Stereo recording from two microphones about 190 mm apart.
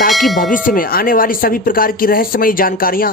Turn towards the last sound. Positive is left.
turn(degrees=50)  # may be behind; listen again after turning